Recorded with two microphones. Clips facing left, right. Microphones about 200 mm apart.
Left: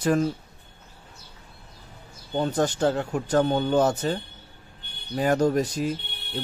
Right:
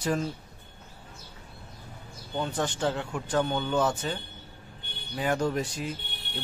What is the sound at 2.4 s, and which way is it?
Speech, 40° left (ahead or behind).